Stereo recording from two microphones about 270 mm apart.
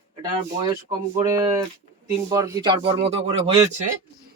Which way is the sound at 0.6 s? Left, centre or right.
Centre.